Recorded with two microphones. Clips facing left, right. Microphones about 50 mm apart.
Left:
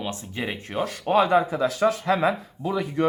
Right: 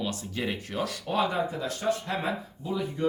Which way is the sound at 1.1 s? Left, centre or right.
Left.